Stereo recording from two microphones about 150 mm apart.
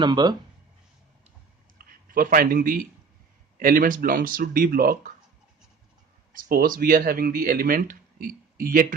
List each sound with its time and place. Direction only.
0.0 s speech: 30° right (ahead or behind)
1.8 s a man's voice: 75° right (ahead or behind)
6.3 s speech: 70° right (ahead or behind)